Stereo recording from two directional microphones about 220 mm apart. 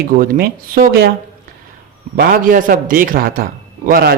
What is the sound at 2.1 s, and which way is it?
A man's voice, 45° right (ahead or behind).